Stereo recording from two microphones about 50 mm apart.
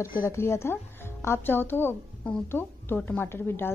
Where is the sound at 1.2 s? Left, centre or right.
Left.